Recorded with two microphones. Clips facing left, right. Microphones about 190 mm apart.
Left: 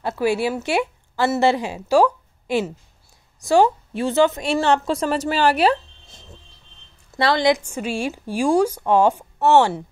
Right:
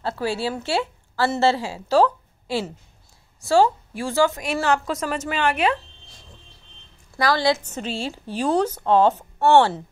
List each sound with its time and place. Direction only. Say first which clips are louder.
0.2 s a woman's voice: left 7 dB; 15° left (ahead or behind); by 5.8 s 35° left (ahead or behind)
7.2 s speech: left 2 dB; 20° left (ahead or behind)